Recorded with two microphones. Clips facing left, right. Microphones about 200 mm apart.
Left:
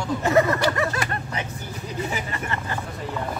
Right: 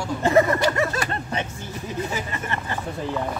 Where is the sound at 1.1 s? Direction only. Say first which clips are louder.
Right 2 dB; 25° right (ahead or behind).